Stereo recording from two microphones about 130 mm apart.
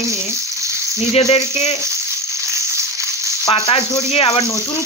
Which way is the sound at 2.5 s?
20° right (ahead or behind).